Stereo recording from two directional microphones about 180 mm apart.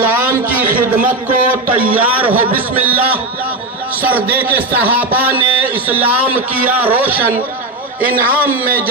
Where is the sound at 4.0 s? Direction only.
10° right (ahead or behind).